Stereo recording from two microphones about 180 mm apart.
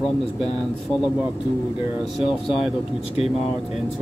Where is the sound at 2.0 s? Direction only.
Centre (ahead or behind).